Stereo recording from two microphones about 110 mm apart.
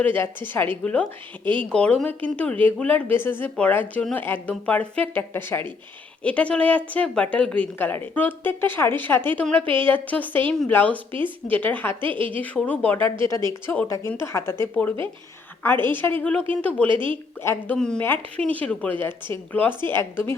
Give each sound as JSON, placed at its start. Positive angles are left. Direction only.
{"t": 0.0, "sound": "a woman's voice", "side_deg": 15}
{"t": 10.9, "sound": "a woman's voice", "side_deg": -50}
{"t": 11.4, "sound": "a woman's voice", "side_deg": 15}
{"t": 16.9, "sound": "a woman's voice", "side_deg": -50}
{"t": 17.4, "sound": "speech", "side_deg": 20}
{"t": 17.7, "sound": "a woman's voice", "side_deg": 5}